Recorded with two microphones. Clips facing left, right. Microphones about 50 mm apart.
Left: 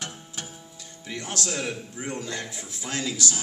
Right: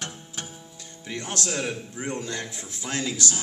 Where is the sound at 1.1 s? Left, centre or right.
Right.